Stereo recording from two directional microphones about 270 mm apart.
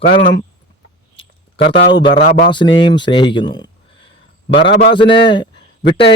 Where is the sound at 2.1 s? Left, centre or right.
Left.